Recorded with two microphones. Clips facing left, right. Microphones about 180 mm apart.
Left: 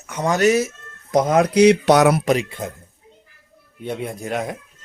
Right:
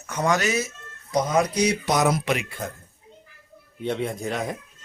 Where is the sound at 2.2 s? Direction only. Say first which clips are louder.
Left 7 dB; 40° left (ahead or behind).